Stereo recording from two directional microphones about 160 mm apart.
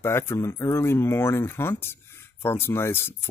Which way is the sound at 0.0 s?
15° left (ahead or behind).